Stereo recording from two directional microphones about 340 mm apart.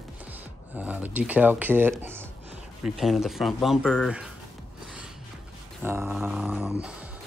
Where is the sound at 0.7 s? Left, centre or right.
Centre.